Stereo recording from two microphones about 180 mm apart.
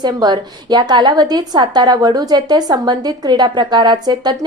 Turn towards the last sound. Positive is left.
turn(degrees=-20)  # may be behind; listen again after turning